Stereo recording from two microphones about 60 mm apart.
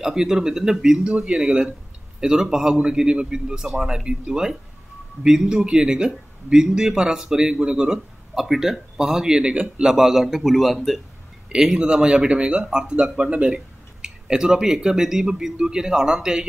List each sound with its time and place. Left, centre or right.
0.0 s a man's voice: centre
11.4 s speech: centre